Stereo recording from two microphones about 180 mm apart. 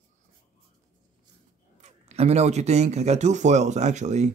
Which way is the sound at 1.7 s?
40° right (ahead or behind).